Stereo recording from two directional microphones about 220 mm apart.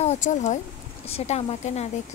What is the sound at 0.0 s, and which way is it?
Speech, 30° left (ahead or behind).